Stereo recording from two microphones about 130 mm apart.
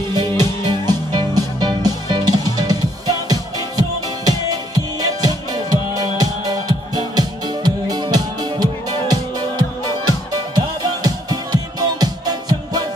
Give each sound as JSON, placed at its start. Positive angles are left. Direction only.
{"t": 0.1, "sound": "music", "side_deg": -30}